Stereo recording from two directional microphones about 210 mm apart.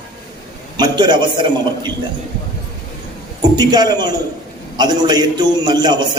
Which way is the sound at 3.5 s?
20° right (ahead or behind).